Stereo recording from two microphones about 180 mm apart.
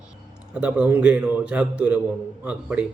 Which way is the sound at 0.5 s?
5° right (ahead or behind).